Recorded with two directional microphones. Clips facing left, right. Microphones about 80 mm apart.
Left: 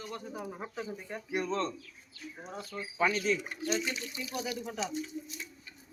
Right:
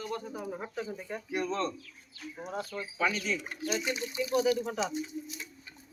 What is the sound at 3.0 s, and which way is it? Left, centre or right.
Speech, left.